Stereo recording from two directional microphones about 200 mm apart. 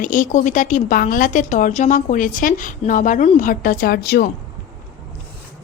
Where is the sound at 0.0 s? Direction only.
40° left (ahead or behind).